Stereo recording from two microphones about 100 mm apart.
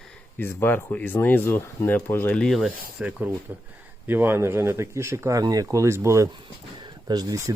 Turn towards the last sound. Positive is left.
turn(degrees=-40)  # may be behind; listen again after turning